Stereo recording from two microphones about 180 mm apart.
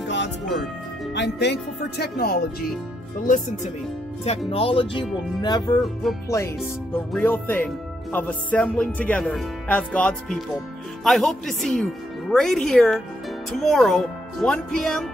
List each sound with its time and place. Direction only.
1.1 s speech: 75° left (ahead or behind)
4.5 s speech: 30° left (ahead or behind); by 15.0 s 5° left (ahead or behind)